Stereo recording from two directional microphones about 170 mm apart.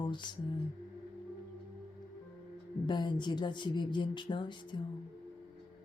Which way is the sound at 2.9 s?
25° left (ahead or behind).